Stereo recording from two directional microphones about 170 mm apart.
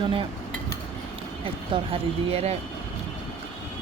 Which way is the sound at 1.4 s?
35° right (ahead or behind).